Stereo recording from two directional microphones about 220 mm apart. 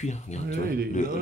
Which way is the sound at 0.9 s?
35° left (ahead or behind).